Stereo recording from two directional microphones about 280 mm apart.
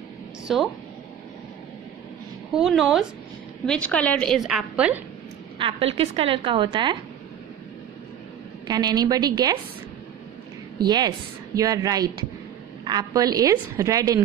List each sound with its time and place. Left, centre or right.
0.5 s a woman's voice: centre
2.5 s a woman's voice: centre
5.6 s a woman's voice: centre
8.6 s a woman's voice: centre
10.9 s a woman's voice: centre